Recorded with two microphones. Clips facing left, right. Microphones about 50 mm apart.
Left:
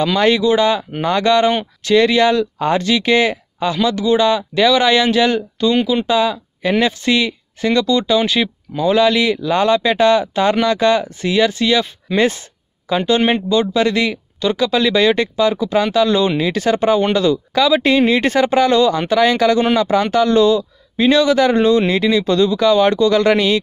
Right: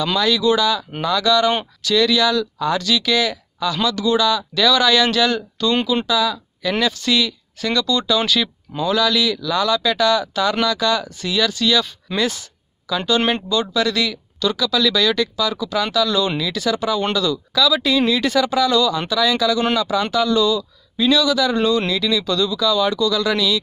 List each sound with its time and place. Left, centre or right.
0.0 s speech: left
6.0 s speech: left
12.9 s speech: left